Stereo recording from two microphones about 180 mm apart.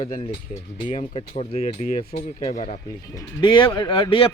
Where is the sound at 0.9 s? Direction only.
35° left (ahead or behind).